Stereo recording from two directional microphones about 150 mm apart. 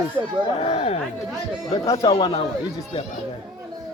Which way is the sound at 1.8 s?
30° left (ahead or behind).